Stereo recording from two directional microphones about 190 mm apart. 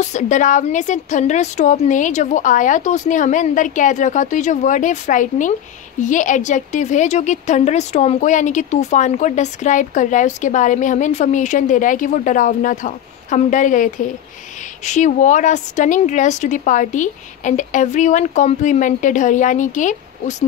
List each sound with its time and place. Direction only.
0.0 s a woman's voice: 40° left (ahead or behind)